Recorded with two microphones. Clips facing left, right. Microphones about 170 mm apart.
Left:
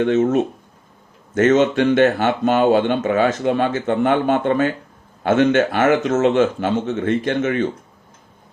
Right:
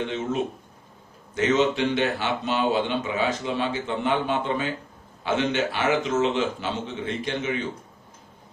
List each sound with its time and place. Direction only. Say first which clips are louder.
0.0 s speech: left 10 dB; 50° left (ahead or behind)